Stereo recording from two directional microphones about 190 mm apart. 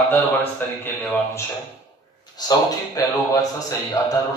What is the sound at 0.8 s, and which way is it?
A man's voice, 10° left (ahead or behind).